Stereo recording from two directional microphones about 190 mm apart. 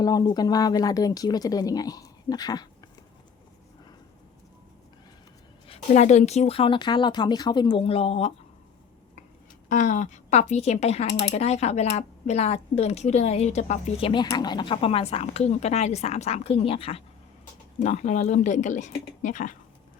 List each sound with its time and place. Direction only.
0.0 s speech: 20° left (ahead or behind)
5.6 s speech: 35° left (ahead or behind)
9.6 s speech: 40° left (ahead or behind)
14.1 s speech: 20° left (ahead or behind); by 19.5 s 40° left (ahead or behind)